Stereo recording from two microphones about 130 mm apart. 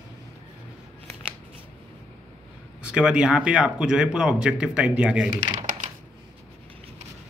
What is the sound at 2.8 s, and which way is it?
Speech, 5° right (ahead or behind).